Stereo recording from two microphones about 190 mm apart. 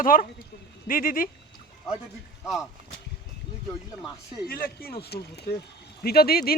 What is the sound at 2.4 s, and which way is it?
Speech, centre (ahead or behind).